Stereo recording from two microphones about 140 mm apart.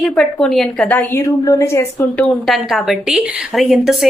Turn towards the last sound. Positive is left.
turn(degrees=0)  # may be behind; listen again after turning